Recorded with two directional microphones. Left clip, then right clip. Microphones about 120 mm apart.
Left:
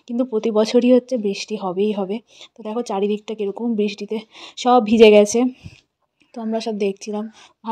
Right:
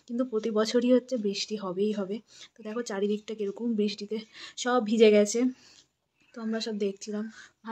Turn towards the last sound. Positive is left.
turn(degrees=40)  # may be behind; listen again after turning